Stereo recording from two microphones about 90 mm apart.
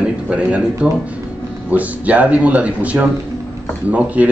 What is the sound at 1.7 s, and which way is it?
Speech, 15° right (ahead or behind).